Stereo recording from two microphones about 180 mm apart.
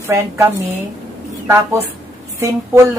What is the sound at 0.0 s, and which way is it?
Speech, 15° right (ahead or behind).